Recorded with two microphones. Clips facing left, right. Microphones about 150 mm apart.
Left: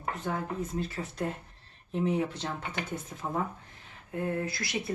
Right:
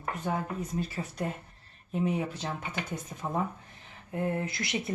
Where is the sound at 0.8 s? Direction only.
10° right (ahead or behind).